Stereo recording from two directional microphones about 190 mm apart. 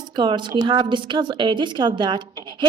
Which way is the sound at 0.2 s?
25° right (ahead or behind).